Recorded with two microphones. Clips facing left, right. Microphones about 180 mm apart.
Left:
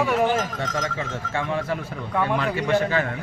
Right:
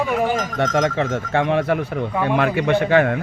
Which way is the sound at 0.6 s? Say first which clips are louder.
Right 9 dB; 70° right (ahead or behind).